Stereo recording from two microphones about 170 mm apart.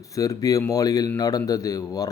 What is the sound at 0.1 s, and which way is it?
Speech, 20° left (ahead or behind).